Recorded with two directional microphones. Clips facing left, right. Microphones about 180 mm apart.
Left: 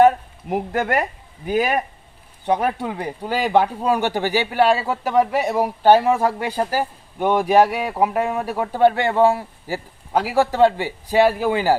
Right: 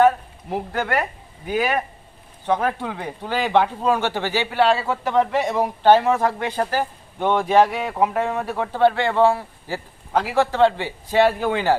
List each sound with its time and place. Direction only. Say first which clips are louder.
1.5 s speech: left 2 dB; 40° left (ahead or behind)
2.5 s speech: left 1 dB; 15° left (ahead or behind)